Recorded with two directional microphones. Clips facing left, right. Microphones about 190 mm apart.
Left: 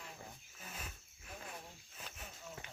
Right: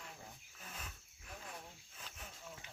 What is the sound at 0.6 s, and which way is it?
Wild animals, 10° left (ahead or behind).